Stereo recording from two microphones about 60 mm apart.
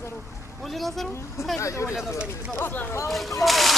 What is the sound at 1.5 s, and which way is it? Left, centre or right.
Speech, left.